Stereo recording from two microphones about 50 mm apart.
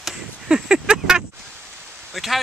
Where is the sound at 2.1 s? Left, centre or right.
Centre.